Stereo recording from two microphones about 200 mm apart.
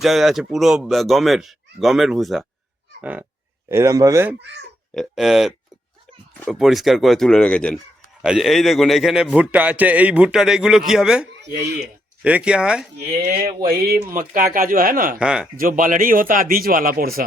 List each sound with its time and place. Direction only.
0.0 s a man's voice: centre (ahead or behind)
3.0 s goose: 10° right (ahead or behind)
3.7 s speech: 15° right (ahead or behind)
4.9 s a man's voice: centre (ahead or behind)
13.6 s a man's voice: 50° right (ahead or behind)
15.2 s a man's voice: 5° right (ahead or behind)
15.5 s a man's voice: 45° right (ahead or behind)